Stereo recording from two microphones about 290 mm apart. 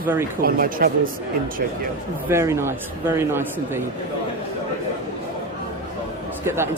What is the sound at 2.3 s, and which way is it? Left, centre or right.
A man's voice, centre.